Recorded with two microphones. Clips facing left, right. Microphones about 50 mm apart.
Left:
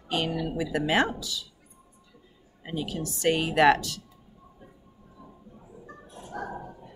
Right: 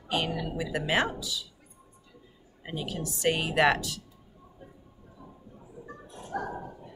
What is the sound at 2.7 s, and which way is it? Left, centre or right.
Speech, centre.